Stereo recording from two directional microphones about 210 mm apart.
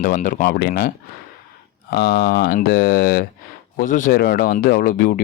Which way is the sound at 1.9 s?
55° left (ahead or behind).